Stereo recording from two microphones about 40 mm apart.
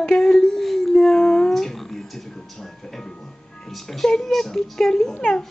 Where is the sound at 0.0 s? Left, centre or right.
Centre.